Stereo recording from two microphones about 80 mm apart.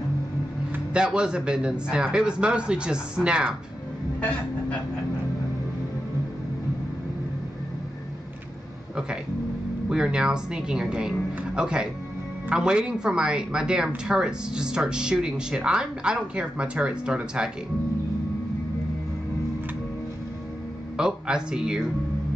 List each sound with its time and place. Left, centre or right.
0.9 s speech: centre
4.2 s a sound: centre
9.8 s speech: centre
21.0 s speech: centre